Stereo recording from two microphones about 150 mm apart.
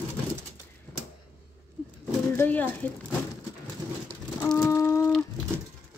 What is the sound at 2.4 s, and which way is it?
Speech, 10° left (ahead or behind).